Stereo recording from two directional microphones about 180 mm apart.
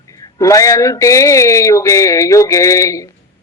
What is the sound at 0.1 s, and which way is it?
A woman's voice, 20° left (ahead or behind).